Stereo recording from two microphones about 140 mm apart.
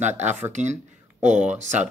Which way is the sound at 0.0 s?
55° right (ahead or behind).